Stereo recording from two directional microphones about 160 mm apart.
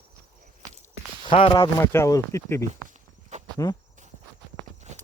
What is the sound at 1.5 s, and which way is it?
Speech, 15° left (ahead or behind).